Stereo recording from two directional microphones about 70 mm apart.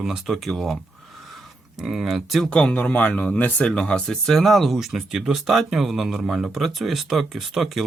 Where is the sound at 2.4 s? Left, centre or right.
Centre.